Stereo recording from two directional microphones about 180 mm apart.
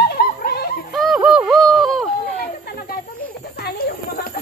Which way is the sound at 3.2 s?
60° left (ahead or behind).